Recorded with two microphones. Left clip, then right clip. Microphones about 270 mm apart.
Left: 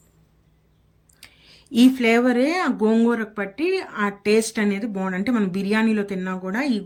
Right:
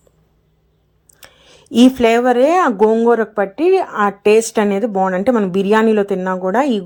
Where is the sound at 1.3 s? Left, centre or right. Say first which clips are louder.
Right 7 dB; centre.